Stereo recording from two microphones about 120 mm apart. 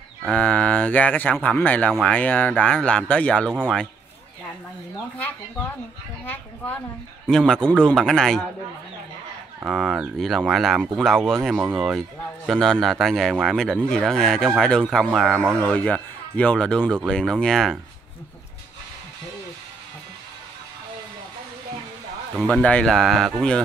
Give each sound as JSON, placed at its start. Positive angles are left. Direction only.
{"t": 0.2, "sound": "a man's voice", "side_deg": 10}
{"t": 3.4, "sound": "speech", "side_deg": -5}
{"t": 6.2, "sound": "a man's voice", "side_deg": 15}
{"t": 7.2, "sound": "speech", "side_deg": 5}
{"t": 9.7, "sound": "a man's voice", "side_deg": -5}
{"t": 22.4, "sound": "speech", "side_deg": 10}